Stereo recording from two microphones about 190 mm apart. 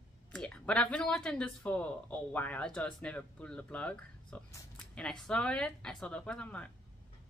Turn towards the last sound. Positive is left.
turn(degrees=5)  # may be behind; listen again after turning